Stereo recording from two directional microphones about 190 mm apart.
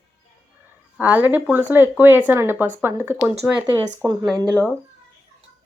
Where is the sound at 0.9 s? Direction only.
10° right (ahead or behind).